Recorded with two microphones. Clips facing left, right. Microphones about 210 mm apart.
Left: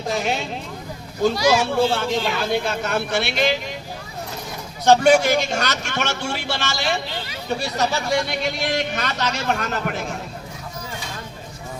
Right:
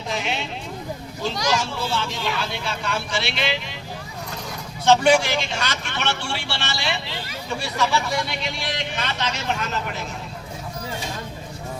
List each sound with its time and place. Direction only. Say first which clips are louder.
0.1 s speech: left 4 dB; 45° left (ahead or behind)
1.5 s speech: left 6 dB; 60° left (ahead or behind)
4.9 s speech: left 3 dB; 40° left (ahead or behind)